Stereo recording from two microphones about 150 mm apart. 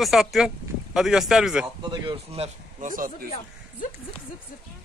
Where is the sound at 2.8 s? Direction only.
65° right (ahead or behind).